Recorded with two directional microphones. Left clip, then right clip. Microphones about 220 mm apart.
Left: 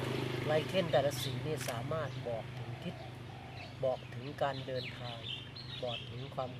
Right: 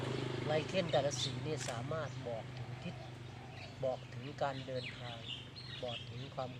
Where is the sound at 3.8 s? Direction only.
5° left (ahead or behind).